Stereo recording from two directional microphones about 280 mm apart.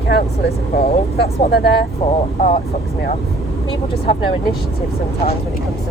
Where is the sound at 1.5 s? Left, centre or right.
Left.